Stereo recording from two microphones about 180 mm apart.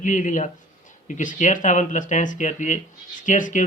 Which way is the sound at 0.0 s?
45° left (ahead or behind).